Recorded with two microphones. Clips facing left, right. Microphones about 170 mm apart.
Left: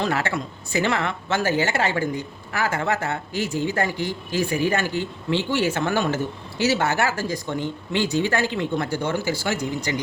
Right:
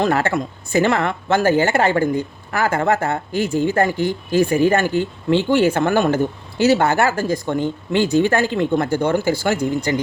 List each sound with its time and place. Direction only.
0.0 s speech: 50° right (ahead or behind)